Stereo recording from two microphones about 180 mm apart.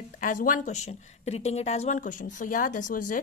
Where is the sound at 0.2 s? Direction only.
45° left (ahead or behind).